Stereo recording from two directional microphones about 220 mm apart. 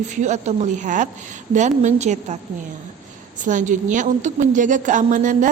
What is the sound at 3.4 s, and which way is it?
Speech, 35° right (ahead or behind).